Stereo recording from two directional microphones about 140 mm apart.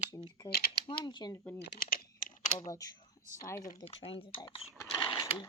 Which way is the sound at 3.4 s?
25° left (ahead or behind).